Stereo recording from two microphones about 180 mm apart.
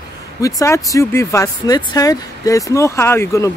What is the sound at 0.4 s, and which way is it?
Speech, 20° left (ahead or behind).